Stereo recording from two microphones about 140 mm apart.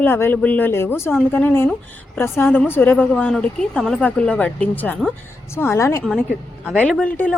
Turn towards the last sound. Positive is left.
turn(degrees=10)  # may be behind; listen again after turning